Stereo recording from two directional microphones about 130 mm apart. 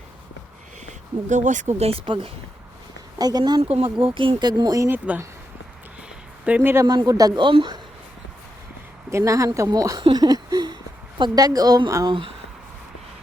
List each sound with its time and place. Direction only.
0.9 s speech: 65° right (ahead or behind); by 2.3 s 45° right (ahead or behind)
3.2 s speech: 30° right (ahead or behind)
3.6 s speech: 50° right (ahead or behind); by 4.9 s 30° right (ahead or behind)
4.9 s speech: 10° right (ahead or behind)
6.4 s speech: 15° right (ahead or behind)
6.8 s speech: 30° right (ahead or behind)
9.0 s speech: 25° right (ahead or behind)
10.0 s a sound: 30° right (ahead or behind)
11.2 s speech: 30° right (ahead or behind)